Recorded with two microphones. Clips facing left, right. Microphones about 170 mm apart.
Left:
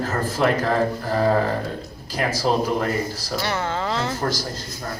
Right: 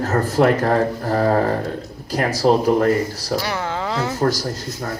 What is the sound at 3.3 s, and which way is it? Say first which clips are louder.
Speech: even; 10° right (ahead or behind).